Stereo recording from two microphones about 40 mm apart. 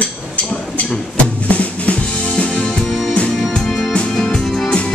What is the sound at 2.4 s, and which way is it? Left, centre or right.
Music, left.